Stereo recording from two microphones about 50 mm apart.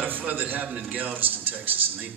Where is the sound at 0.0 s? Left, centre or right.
Right.